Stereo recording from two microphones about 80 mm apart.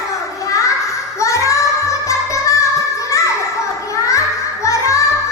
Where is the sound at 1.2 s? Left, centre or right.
Left.